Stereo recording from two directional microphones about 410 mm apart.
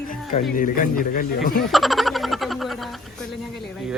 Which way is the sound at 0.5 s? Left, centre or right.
Centre.